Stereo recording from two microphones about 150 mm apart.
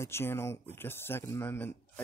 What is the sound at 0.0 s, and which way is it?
Speech, 15° left (ahead or behind).